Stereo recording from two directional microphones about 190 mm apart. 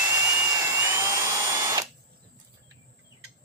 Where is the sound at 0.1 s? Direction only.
15° right (ahead or behind).